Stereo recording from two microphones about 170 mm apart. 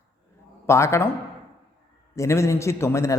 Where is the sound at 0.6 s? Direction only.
15° left (ahead or behind).